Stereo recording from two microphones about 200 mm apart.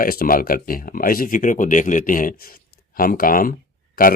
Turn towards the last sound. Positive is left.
turn(degrees=45)  # may be behind; listen again after turning